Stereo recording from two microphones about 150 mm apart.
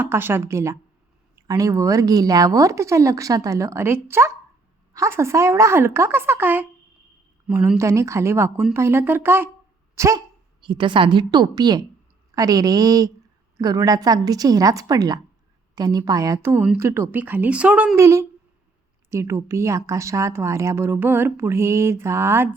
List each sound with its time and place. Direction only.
0.0 s speech: 15° right (ahead or behind)
10.6 s a woman's voice: 35° right (ahead or behind); by 17.9 s 5° right (ahead or behind)
17.9 s speech: 20° right (ahead or behind)